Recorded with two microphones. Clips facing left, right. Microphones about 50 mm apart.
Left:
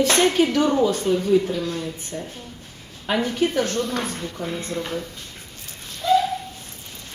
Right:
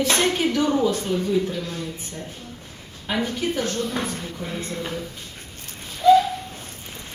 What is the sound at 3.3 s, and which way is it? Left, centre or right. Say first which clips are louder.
Speech: left 3 dB; left.